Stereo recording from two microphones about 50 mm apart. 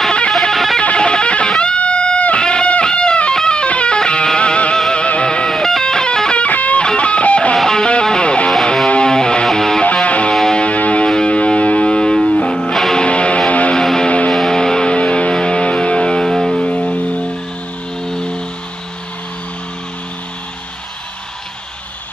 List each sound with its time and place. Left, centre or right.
0.4 s music: centre
0.8 s music: centre
4.7 s music: centre
5.0 s music: left
5.5 s music: centre
6.4 s music: left
7.5 s music: centre
10.0 s music: left
10.3 s music: centre
10.6 s music: left
14.3 s music: centre
16.6 s music: left